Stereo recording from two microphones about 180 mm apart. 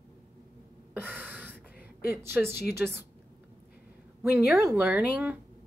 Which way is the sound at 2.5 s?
60° left (ahead or behind).